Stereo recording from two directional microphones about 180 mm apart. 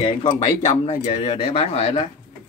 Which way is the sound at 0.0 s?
30° left (ahead or behind).